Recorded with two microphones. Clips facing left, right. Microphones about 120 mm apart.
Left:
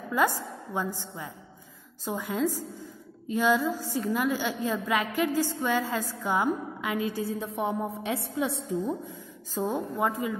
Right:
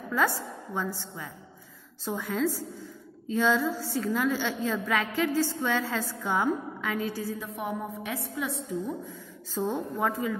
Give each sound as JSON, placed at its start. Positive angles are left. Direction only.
{"t": 0.1, "sound": "a woman's voice", "side_deg": 15}
{"t": 7.3, "sound": "a woman's voice", "side_deg": 30}
{"t": 9.6, "sound": "a woman's voice", "side_deg": 10}